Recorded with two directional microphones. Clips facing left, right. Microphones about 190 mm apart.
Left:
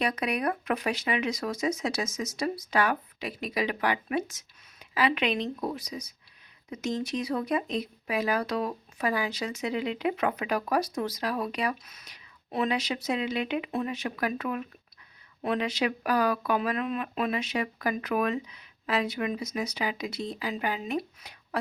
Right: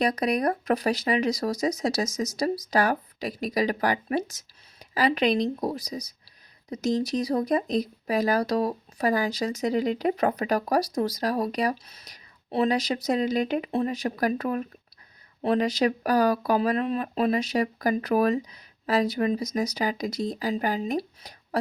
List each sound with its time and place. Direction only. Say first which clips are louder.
0.0 s speech: right 4 dB; 35° right (ahead or behind)